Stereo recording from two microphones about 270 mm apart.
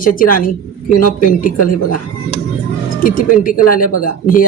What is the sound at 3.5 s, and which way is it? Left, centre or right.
Speech, left.